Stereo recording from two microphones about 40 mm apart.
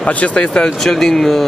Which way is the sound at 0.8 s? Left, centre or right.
Centre.